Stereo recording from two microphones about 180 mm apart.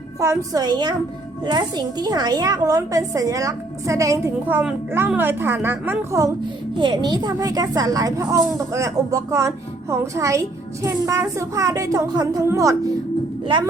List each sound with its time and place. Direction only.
0.2 s a woman's voice: 20° right (ahead or behind)